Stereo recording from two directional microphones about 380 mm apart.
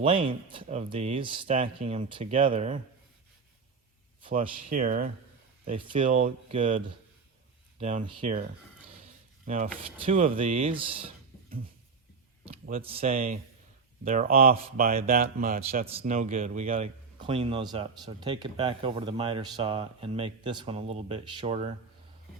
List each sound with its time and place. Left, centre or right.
0.0 s speech: centre
4.2 s speech: right
10.1 s speech: centre
12.6 s speech: centre